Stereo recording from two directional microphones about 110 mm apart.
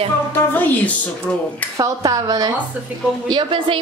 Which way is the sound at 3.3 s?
50° right (ahead or behind).